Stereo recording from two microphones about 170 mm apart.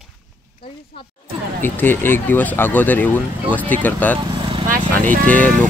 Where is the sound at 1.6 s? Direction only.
10° left (ahead or behind).